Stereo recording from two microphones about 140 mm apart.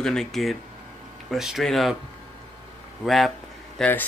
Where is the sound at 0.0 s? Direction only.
5° left (ahead or behind).